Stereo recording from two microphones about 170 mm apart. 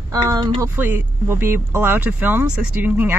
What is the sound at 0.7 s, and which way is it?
Speech, 10° right (ahead or behind).